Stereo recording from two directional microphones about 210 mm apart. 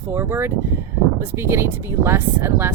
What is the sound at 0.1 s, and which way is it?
Speech, 10° right (ahead or behind).